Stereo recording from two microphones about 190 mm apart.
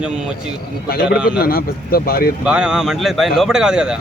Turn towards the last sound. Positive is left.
turn(degrees=-5)  # may be behind; listen again after turning